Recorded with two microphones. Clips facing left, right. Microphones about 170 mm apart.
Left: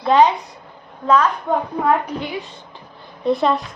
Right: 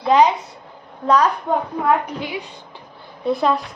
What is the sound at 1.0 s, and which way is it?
Speech, 35° right (ahead or behind).